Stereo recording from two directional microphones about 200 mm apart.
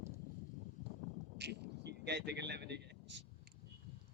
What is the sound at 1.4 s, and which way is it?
Vehicle, 60° right (ahead or behind).